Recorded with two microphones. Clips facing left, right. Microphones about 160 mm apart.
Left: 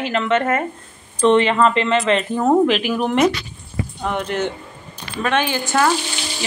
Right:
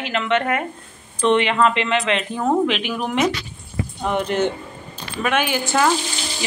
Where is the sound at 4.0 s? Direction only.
15° right (ahead or behind).